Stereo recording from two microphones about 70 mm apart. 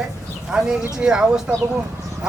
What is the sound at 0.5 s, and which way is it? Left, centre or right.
Speech, centre.